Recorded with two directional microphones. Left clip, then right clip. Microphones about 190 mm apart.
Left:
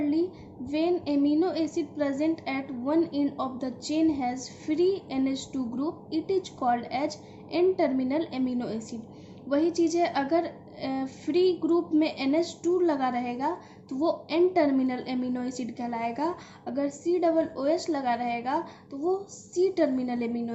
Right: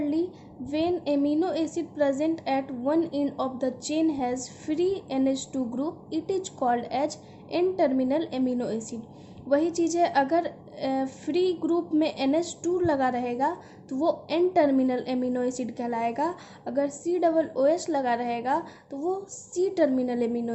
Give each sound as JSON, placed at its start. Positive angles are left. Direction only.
{"t": 0.7, "sound": "a woman's voice", "side_deg": -45}